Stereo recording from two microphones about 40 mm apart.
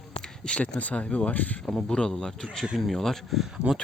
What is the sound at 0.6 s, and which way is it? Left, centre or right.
Speech, left.